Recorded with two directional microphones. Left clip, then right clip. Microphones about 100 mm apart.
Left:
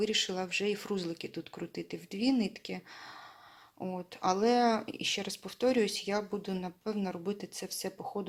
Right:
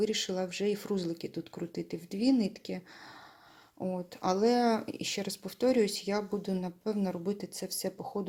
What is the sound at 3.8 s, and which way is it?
Speech, 35° right (ahead or behind).